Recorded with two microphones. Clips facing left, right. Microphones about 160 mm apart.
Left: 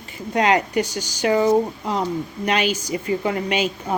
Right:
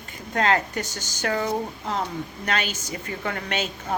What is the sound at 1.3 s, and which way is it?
Speech, 40° left (ahead or behind).